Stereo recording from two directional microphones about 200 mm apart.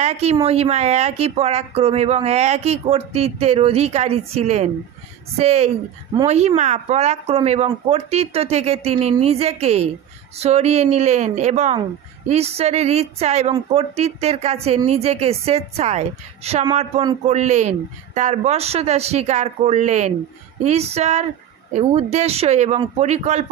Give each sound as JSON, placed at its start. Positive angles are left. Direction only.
{"t": 0.0, "sound": "a woman's voice", "side_deg": -30}